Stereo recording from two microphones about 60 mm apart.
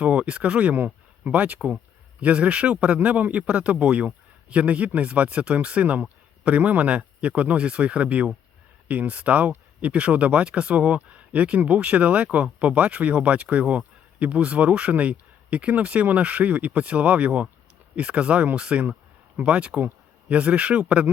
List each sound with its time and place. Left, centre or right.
0.0 s speech: centre